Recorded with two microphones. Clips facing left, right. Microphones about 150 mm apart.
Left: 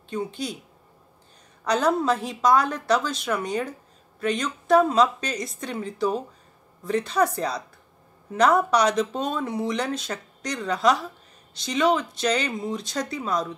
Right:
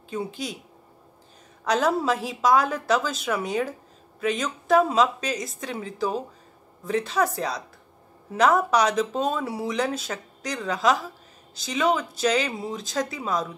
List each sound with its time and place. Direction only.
0.1 s speech: centre (ahead or behind)
1.6 s speech: 5° right (ahead or behind)